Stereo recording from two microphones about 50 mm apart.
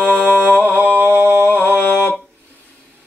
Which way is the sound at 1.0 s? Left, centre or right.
Right.